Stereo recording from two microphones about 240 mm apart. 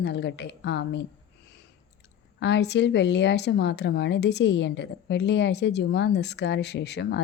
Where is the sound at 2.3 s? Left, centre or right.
Left.